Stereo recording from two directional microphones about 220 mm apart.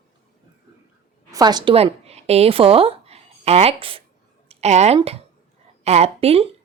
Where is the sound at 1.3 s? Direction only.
20° right (ahead or behind).